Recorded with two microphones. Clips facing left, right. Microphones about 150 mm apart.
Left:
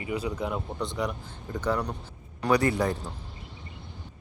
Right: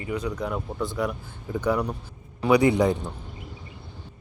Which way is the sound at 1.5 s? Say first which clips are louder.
Right 4 dB; 10° right (ahead or behind).